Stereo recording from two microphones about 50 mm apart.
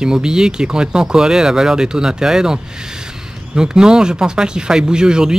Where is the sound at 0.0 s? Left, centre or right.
Centre.